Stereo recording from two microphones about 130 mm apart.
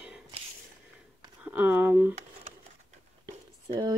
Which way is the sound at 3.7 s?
35° right (ahead or behind).